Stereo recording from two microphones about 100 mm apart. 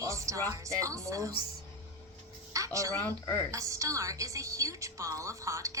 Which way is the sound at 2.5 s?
30° right (ahead or behind).